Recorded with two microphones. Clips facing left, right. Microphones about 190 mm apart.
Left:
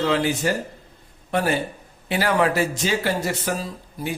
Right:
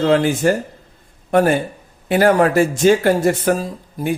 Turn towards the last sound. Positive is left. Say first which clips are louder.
# right 6 dB
turn(degrees=-50)  # may be behind; listen again after turning